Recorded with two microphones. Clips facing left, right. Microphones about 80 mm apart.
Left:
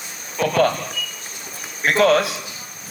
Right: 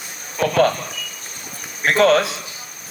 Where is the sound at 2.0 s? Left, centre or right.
Right.